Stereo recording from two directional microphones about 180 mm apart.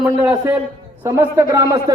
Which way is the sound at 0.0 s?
10° right (ahead or behind).